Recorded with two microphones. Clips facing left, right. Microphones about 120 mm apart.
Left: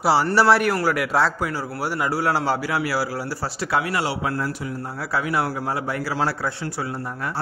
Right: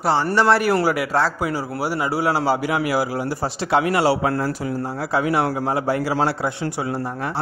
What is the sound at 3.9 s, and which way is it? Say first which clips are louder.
Speech: right 6 dB; 35° right (ahead or behind).